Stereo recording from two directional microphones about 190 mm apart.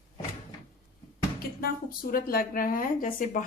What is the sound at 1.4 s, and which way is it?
Speech, 50° left (ahead or behind).